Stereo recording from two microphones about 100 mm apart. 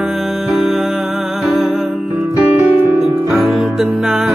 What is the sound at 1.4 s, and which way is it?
Music, 5° right (ahead or behind).